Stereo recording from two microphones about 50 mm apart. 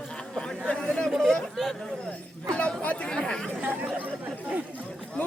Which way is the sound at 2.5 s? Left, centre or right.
Left.